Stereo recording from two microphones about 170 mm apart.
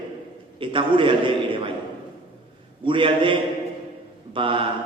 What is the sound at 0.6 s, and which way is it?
A man's voice, 30° right (ahead or behind).